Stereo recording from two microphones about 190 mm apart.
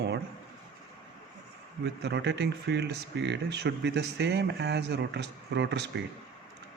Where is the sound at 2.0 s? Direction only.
60° right (ahead or behind).